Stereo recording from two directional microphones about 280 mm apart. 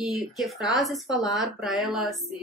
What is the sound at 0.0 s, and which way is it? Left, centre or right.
Speech, centre.